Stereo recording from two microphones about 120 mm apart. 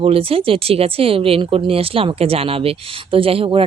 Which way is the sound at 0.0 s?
50° right (ahead or behind).